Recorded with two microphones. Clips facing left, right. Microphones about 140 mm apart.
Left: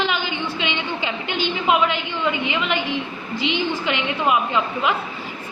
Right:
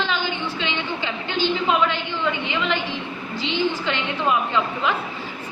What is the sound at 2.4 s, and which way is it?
A woman's voice, 10° left (ahead or behind).